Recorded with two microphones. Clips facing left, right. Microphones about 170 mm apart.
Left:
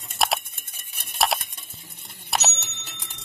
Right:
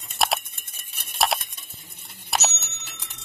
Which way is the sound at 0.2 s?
Centre (ahead or behind).